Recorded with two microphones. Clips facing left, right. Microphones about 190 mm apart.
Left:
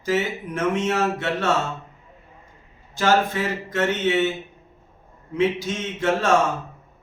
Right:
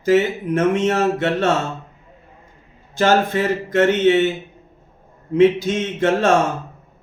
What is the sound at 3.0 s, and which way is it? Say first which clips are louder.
Speech: right 4 dB; 55° right (ahead or behind).